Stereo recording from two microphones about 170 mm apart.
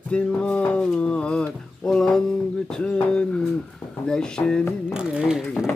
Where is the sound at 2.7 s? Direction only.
5° left (ahead or behind).